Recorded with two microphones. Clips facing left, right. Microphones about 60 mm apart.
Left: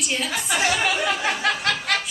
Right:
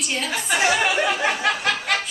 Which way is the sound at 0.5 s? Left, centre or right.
Centre.